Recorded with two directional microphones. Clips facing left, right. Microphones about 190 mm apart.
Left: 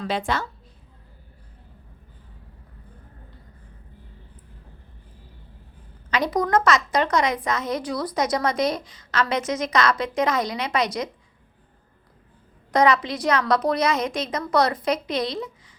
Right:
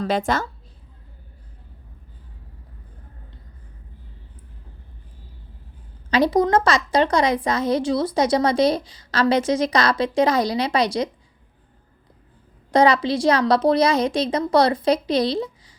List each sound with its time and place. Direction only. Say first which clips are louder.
0.0 s a woman's voice: right 4 dB; 45° right (ahead or behind)
6.1 s a woman's voice: right 5 dB; 30° right (ahead or behind)
12.7 s a woman's voice: right 3 dB; 30° right (ahead or behind)